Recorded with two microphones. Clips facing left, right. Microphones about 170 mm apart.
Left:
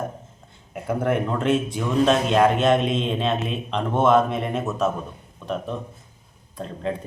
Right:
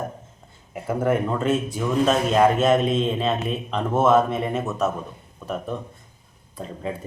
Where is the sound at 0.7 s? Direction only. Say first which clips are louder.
Right 1 dB; centre (ahead or behind).